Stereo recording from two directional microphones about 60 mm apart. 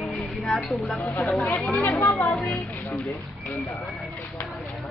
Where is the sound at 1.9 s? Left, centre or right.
Left.